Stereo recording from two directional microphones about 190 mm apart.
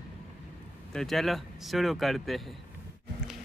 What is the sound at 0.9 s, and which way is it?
Speech, centre (ahead or behind).